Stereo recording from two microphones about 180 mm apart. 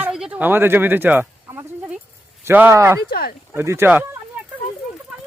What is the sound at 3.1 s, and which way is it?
Speech, 55° left (ahead or behind).